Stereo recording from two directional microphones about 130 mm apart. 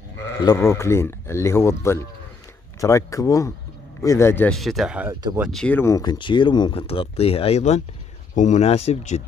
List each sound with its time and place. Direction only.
0.4 s speech: 25° left (ahead or behind)
4.5 s speech: centre (ahead or behind)
5.8 s speech: 25° left (ahead or behind)
6.1 s speech: 40° left (ahead or behind); by 9.2 s 60° left (ahead or behind)